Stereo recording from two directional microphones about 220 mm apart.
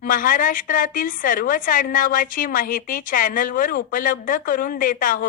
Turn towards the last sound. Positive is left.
turn(degrees=40)  # may be behind; listen again after turning